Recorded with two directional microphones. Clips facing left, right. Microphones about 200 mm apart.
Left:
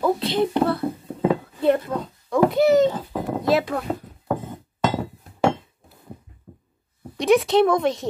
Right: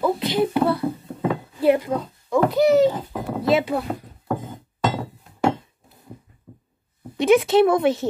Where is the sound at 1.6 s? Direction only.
10° right (ahead or behind).